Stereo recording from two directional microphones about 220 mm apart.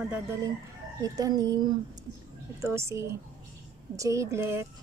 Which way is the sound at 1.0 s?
15° right (ahead or behind).